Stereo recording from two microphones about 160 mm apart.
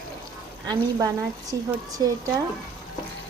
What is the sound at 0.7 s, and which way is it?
Speech, 25° right (ahead or behind).